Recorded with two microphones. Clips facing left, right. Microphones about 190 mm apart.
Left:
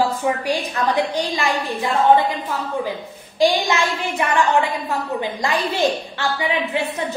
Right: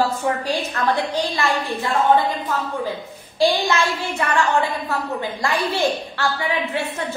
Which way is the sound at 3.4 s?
15° left (ahead or behind).